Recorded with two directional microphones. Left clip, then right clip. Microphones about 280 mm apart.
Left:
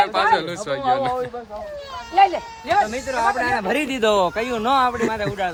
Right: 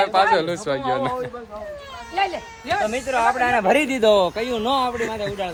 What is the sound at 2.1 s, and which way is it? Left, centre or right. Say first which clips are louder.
Speech: left 7 dB; left.